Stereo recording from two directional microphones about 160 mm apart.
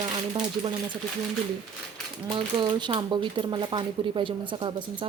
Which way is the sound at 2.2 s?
30° right (ahead or behind).